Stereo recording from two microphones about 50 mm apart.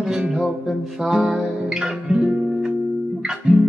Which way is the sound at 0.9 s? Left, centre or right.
Centre.